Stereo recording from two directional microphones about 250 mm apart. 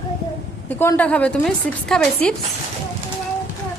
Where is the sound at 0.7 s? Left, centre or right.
Centre.